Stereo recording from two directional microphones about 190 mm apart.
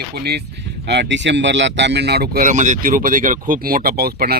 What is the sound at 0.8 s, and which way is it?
Speech, 65° right (ahead or behind).